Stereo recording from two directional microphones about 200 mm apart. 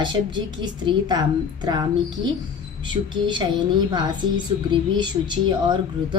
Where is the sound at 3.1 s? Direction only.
25° right (ahead or behind).